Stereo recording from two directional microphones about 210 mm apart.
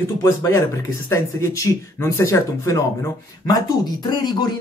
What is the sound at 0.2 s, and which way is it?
Speech, 15° left (ahead or behind).